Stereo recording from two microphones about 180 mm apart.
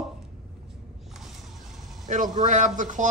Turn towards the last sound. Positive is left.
turn(degrees=-45)  # may be behind; listen again after turning